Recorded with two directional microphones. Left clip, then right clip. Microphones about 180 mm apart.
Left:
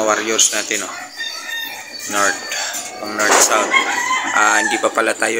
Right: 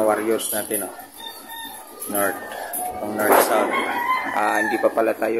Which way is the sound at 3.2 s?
15° right (ahead or behind).